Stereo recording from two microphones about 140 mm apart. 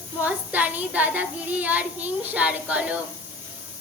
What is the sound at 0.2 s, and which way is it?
Child singing, 10° right (ahead or behind).